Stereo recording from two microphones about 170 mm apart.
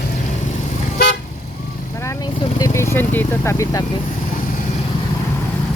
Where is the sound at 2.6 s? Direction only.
15° left (ahead or behind).